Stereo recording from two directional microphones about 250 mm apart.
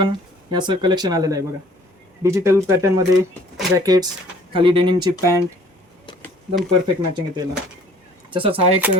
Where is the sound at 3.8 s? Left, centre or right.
Centre.